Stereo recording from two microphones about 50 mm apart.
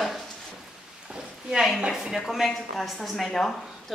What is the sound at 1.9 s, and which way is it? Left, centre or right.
A woman's voice, centre.